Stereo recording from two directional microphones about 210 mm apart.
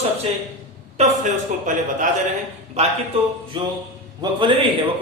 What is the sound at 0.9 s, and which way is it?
Speech, 35° right (ahead or behind).